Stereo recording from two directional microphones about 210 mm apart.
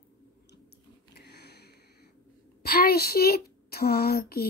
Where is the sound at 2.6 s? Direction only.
45° left (ahead or behind).